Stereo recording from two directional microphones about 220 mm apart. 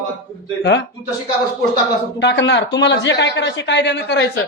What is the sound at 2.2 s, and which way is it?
Speech, 50° left (ahead or behind).